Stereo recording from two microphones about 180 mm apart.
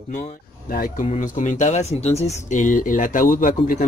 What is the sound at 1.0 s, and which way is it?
Speech, 40° left (ahead or behind).